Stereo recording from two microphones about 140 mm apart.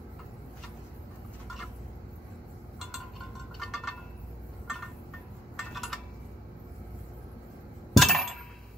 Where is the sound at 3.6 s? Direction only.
Centre (ahead or behind).